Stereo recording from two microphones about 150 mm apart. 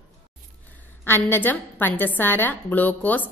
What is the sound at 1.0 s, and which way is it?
A woman's voice, 15° left (ahead or behind).